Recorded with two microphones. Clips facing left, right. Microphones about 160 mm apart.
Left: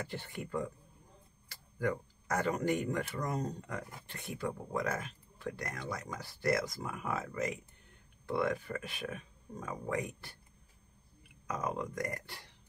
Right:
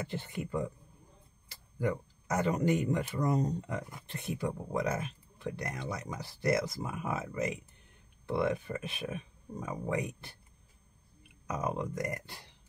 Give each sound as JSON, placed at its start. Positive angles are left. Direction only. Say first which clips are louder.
{"t": 0.0, "sound": "speech", "louder": "right 3 dB", "side_deg": -20}
{"t": 1.8, "sound": "speech", "louder": "right 1 dB", "side_deg": -20}
{"t": 11.4, "sound": "speech", "louder": "right 2 dB", "side_deg": -20}